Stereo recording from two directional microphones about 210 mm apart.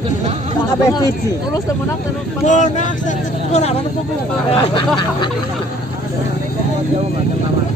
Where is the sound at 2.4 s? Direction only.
35° left (ahead or behind).